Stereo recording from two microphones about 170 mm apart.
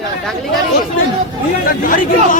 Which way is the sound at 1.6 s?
55° left (ahead or behind).